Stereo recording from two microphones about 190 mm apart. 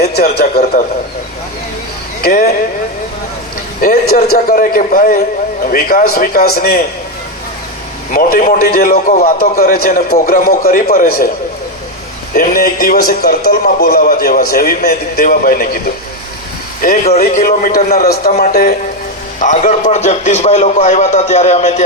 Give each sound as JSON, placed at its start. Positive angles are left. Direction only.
{"t": 0.0, "sound": "a man's voice", "side_deg": 55}
{"t": 2.2, "sound": "a man's voice", "side_deg": 50}
{"t": 3.8, "sound": "a man's voice", "side_deg": 50}
{"t": 8.1, "sound": "a man's voice", "side_deg": 50}
{"t": 12.3, "sound": "a man's voice", "side_deg": 50}
{"t": 17.1, "sound": "a man's voice", "side_deg": 40}
{"t": 17.7, "sound": "a man's voice", "side_deg": 55}